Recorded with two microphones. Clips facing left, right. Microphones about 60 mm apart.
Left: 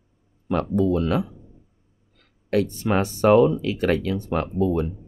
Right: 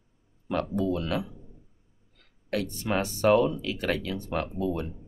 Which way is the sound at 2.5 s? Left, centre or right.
Left.